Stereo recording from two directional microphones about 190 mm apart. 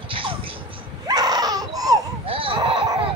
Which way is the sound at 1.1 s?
20° right (ahead or behind).